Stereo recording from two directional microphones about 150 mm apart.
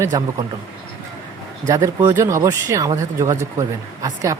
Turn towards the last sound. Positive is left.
turn(degrees=-20)  # may be behind; listen again after turning